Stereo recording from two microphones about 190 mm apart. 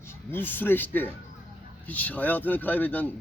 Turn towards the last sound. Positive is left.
turn(degrees=10)  # may be behind; listen again after turning